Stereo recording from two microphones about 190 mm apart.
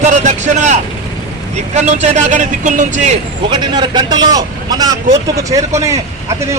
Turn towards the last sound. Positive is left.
turn(degrees=-15)  # may be behind; listen again after turning